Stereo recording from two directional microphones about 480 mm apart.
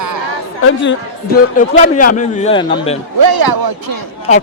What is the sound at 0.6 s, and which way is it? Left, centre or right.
A man's voice, left.